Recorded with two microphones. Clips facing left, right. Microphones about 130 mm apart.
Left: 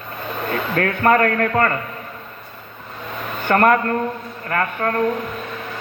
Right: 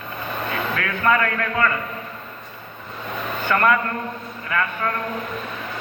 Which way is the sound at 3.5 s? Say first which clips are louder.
Left 4 dB; 45° left (ahead or behind).